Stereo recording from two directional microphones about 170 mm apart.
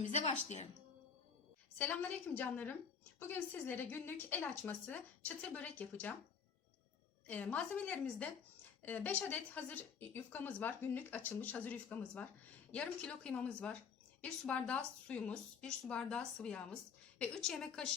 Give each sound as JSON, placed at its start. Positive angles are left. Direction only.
{"t": 0.0, "sound": "speech", "side_deg": 40}
{"t": 1.8, "sound": "speech", "side_deg": 10}
{"t": 7.3, "sound": "a woman's voice", "side_deg": 10}